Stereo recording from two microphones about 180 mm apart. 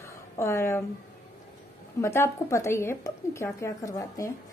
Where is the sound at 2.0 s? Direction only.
15° left (ahead or behind).